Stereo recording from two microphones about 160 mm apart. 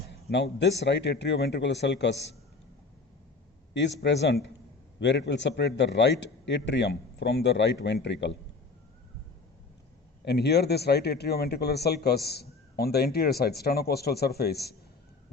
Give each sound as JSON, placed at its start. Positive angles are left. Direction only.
{"t": 0.1, "sound": "a man's voice", "side_deg": 90}
{"t": 3.8, "sound": "a man's voice", "side_deg": 90}
{"t": 10.2, "sound": "speech", "side_deg": 90}